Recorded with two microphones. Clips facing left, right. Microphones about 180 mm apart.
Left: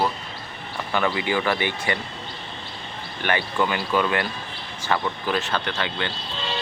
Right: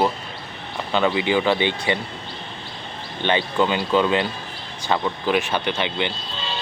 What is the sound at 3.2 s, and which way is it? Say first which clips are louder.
Speech: right 3 dB; 20° right (ahead or behind).